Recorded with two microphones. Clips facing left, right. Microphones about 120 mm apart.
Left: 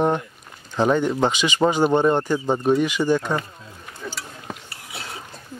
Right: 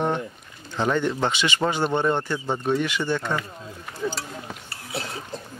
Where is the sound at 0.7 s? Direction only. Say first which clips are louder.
Left 4 dB; 15° left (ahead or behind).